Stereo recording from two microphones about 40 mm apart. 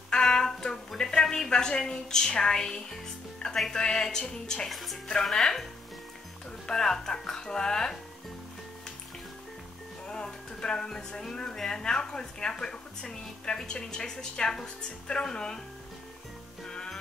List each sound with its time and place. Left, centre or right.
0.1 s music: centre
1.5 s a woman's voice: centre
3.4 s music: centre
3.9 s a woman's voice: centre
4.6 s music: centre
5.2 s a woman's voice: centre
10.0 s a woman's voice: centre
16.6 s music: centre